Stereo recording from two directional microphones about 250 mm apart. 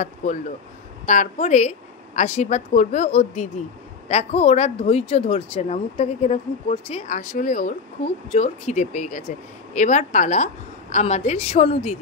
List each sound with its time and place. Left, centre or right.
0.0 s speech: left